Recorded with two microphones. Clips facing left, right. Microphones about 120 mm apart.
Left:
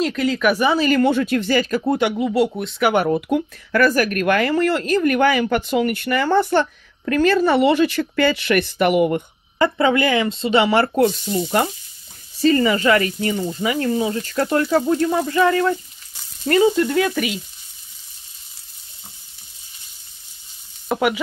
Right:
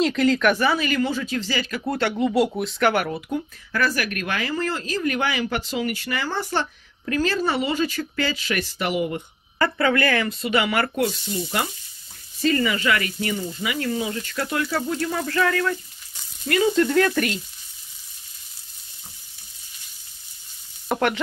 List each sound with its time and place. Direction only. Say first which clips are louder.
0.0 s speech: even; centre (ahead or behind)
0.7 s speech: left 7 dB; 40° left (ahead or behind)
1.0 s speech: left 8 dB; 60° left (ahead or behind); by 1.9 s 45° left (ahead or behind)
1.9 s speech: left 2 dB; 15° left (ahead or behind)
2.1 s speech: left 2 dB; centre (ahead or behind)
2.9 s speech: left 6 dB; 25° left (ahead or behind)
3.2 s speech: left 7 dB; 65° left (ahead or behind)
9.6 s speech: left 4 dB; 20° left (ahead or behind)
11.1 s speech: left 6 dB; 40° left (ahead or behind)
12.4 s speech: left 6 dB; 35° left (ahead or behind)
15.0 s speech: left 6 dB; 20° left (ahead or behind)
16.7 s speech: even; 5° left (ahead or behind)
20.9 s speech: left 3 dB; 5° left (ahead or behind)